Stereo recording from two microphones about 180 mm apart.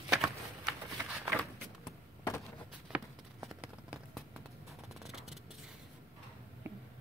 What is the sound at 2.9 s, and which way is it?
Clip-clop, 5° right (ahead or behind).